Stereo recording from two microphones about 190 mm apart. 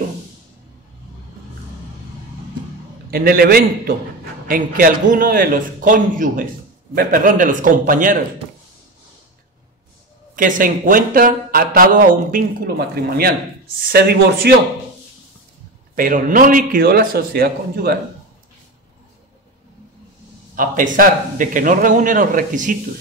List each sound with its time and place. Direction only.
3.1 s speech: 55° right (ahead or behind)
10.3 s speech: 45° right (ahead or behind)
15.9 s speech: 45° right (ahead or behind)
20.5 s speech: 45° right (ahead or behind)